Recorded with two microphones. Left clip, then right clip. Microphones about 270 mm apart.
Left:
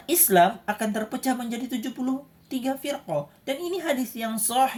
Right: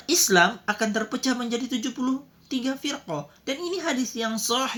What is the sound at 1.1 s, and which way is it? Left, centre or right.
A woman's voice, centre.